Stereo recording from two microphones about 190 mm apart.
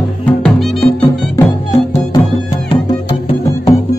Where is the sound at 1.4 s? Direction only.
15° left (ahead or behind).